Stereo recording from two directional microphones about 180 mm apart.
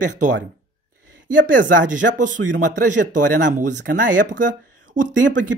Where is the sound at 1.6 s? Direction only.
45° right (ahead or behind).